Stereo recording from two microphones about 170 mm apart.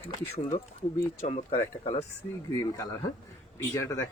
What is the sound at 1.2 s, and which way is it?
Speech, 35° left (ahead or behind).